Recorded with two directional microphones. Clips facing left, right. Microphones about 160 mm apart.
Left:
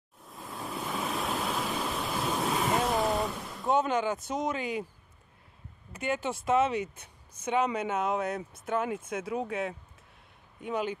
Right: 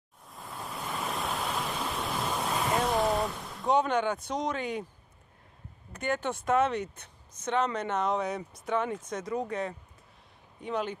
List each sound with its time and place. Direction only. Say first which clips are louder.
0.2 s pink noise: left 1 dB; centre (ahead or behind)
5.9 s speech: even; 5° left (ahead or behind)